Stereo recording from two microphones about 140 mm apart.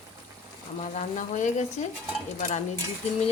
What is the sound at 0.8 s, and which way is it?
Frying, 60° left (ahead or behind).